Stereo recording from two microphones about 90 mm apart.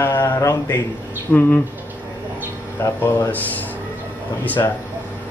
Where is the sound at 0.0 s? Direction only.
25° left (ahead or behind).